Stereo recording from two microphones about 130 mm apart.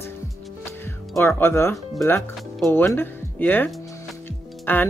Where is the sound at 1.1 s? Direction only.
20° left (ahead or behind).